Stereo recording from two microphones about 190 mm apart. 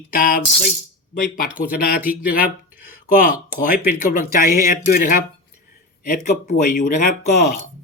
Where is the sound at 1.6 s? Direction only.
50° left (ahead or behind).